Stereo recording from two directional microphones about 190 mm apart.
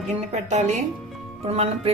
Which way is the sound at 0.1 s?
35° right (ahead or behind).